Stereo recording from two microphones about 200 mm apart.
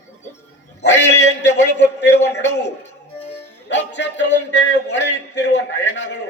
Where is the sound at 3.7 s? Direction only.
60° left (ahead or behind).